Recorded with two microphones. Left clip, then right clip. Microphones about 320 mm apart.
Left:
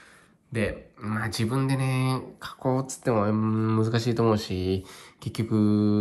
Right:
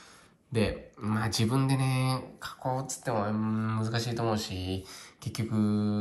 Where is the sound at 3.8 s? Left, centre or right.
Left.